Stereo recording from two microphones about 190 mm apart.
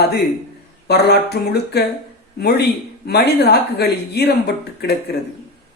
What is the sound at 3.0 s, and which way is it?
Speech, 60° left (ahead or behind).